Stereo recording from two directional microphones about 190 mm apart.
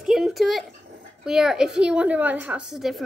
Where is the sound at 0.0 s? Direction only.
Centre (ahead or behind).